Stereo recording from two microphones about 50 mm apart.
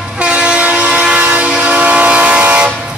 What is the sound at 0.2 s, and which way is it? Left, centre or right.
Train, centre.